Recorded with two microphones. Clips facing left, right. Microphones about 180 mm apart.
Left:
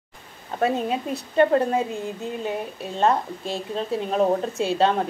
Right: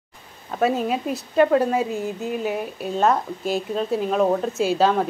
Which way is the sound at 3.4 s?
Centre (ahead or behind).